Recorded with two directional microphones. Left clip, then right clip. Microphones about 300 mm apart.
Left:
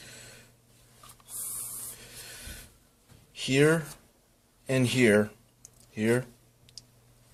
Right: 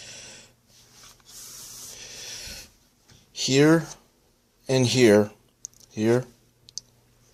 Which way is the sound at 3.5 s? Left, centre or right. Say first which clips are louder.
Right 5 dB; right.